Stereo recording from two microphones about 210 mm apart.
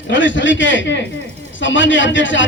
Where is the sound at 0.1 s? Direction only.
60° left (ahead or behind).